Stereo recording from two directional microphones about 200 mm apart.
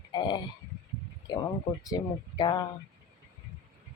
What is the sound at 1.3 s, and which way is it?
Speech, 20° left (ahead or behind).